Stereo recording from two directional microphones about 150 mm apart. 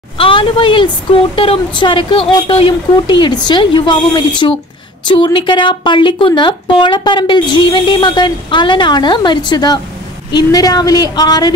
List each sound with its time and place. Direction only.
0.2 s a woman's voice: 35° left (ahead or behind)